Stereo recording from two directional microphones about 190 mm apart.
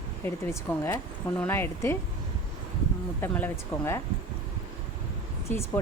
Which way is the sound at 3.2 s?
10° left (ahead or behind).